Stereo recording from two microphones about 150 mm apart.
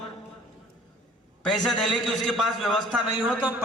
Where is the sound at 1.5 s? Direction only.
Centre (ahead or behind).